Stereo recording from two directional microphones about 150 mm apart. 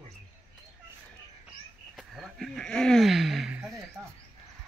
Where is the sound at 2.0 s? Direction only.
Centre (ahead or behind).